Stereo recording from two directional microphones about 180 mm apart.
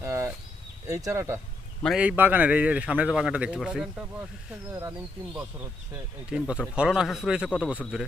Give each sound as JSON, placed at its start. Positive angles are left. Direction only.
{"t": 0.0, "sound": "a sound", "side_deg": -15}
{"t": 0.9, "sound": "a man's voice", "side_deg": -15}
{"t": 1.8, "sound": "a man's voice", "side_deg": -5}
{"t": 4.7, "sound": "a man's voice", "side_deg": -15}
{"t": 6.3, "sound": "speech", "side_deg": -5}